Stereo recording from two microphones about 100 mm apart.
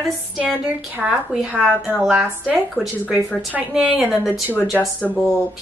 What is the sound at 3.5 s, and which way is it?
Speech, 10° right (ahead or behind).